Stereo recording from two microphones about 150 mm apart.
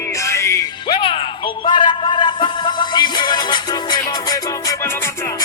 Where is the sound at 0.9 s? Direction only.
35° left (ahead or behind).